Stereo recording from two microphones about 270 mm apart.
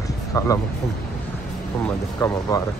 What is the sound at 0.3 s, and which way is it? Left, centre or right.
Speech, centre.